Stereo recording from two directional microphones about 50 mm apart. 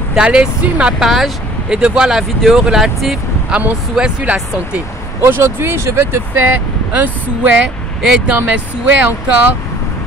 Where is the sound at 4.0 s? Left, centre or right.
Right.